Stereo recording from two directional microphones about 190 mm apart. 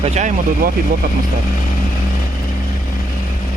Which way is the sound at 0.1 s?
40° right (ahead or behind).